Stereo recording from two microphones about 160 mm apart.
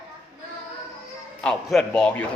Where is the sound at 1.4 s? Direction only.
Centre (ahead or behind).